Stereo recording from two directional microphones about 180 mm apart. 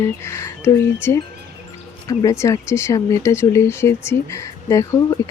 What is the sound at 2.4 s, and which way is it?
Speech, 15° left (ahead or behind).